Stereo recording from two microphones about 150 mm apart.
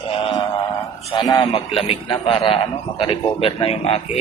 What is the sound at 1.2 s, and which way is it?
A man's voice, 35° left (ahead or behind).